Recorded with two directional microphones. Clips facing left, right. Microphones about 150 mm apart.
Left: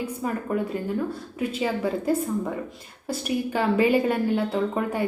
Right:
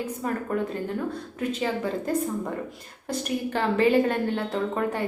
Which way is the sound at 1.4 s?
10° left (ahead or behind).